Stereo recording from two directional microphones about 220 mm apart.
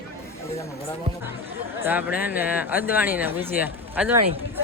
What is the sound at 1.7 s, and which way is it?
Speech, 10° right (ahead or behind).